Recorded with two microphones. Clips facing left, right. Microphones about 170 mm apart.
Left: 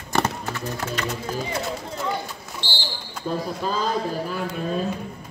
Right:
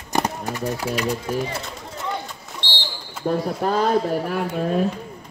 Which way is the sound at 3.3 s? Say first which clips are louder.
Right 5 dB; 65° right (ahead or behind).